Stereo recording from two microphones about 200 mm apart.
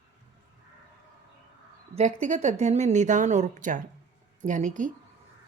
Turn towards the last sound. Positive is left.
turn(degrees=-40)  # may be behind; listen again after turning